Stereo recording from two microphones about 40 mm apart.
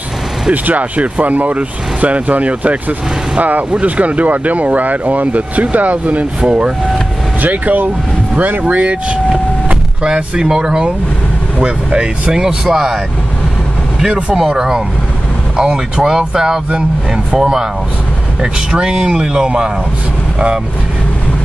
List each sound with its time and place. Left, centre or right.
0.5 s speech: right
6.4 s speech: right
7.4 s speech: right
8.6 s speech: right
12.3 s speech: centre
15.5 s speech: centre